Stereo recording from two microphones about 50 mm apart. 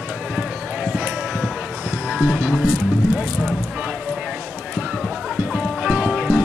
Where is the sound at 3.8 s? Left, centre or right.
Right.